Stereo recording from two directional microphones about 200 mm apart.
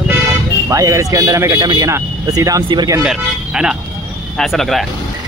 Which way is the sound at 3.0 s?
5° right (ahead or behind).